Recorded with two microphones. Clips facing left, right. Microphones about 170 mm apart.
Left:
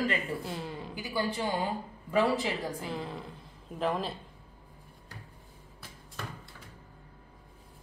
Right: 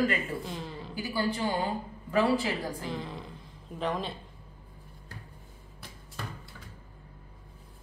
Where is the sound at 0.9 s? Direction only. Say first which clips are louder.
Right 2 dB; 20° left (ahead or behind).